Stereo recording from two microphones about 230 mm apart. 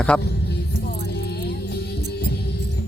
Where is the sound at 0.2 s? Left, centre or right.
Left.